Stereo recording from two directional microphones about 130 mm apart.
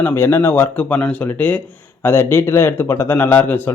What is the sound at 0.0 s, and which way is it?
A man's voice, 15° left (ahead or behind).